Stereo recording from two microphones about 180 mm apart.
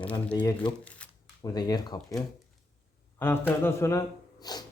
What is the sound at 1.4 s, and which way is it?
Speech, 20° left (ahead or behind).